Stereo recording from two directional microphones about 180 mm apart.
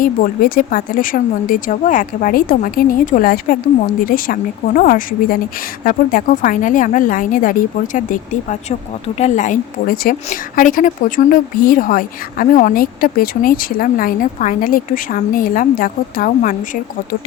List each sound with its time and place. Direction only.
0.0 s a woman's voice: 55° left (ahead or behind)